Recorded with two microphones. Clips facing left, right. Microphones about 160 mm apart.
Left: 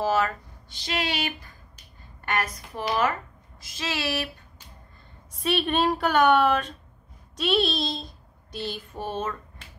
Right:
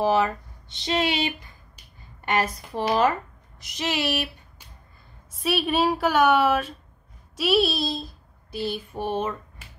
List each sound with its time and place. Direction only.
0.0 s speech: 15° right (ahead or behind); by 3.1 s 30° right (ahead or behind)
3.5 s speech: 20° right (ahead or behind)
5.3 s a woman's voice: centre (ahead or behind)
7.3 s child singing: 5° right (ahead or behind)